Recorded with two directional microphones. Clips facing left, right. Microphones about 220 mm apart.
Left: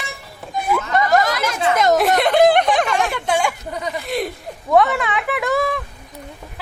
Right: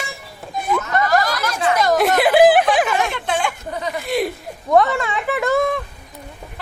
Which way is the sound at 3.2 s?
10° left (ahead or behind).